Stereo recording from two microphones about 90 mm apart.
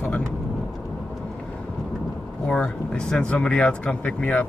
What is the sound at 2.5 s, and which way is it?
Speech, 10° left (ahead or behind).